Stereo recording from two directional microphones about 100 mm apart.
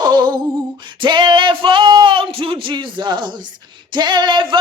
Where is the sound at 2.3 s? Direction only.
60° right (ahead or behind).